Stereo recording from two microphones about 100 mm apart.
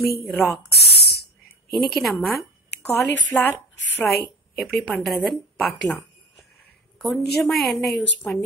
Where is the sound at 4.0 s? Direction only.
Centre (ahead or behind).